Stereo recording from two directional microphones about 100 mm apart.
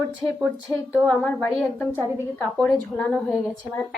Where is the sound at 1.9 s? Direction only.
15° right (ahead or behind).